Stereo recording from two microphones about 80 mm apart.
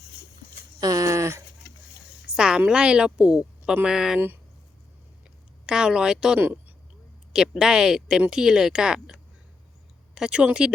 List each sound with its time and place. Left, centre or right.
0.8 s a sound: right
2.2 s a woman's voice: centre
5.6 s speech: centre
6.4 s speech: right
7.3 s speech: centre
10.2 s speech: centre